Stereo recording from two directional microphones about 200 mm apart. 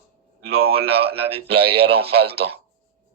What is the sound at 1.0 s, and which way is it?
Speech, 30° right (ahead or behind).